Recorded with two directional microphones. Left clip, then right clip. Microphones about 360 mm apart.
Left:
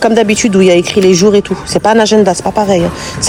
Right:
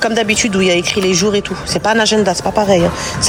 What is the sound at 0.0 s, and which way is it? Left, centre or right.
Speech, centre.